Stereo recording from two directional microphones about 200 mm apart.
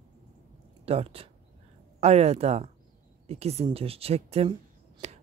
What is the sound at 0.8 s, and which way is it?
Speech, 30° right (ahead or behind).